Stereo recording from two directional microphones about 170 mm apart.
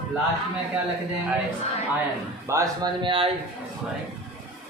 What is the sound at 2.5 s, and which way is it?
Speech, 20° right (ahead or behind).